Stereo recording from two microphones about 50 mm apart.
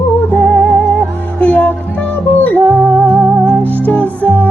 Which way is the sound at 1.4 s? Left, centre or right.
Left.